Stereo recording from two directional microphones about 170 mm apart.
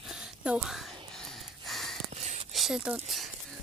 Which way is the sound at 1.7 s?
Centre (ahead or behind).